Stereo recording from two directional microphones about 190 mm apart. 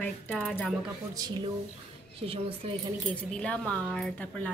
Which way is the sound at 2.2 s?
30° right (ahead or behind).